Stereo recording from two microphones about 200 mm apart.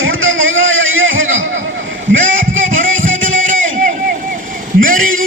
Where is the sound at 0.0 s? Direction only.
80° right.